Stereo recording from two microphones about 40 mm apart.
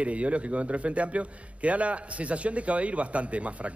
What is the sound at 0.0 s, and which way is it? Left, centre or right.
Speech, right.